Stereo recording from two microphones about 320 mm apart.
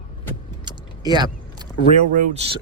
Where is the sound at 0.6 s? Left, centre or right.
Centre.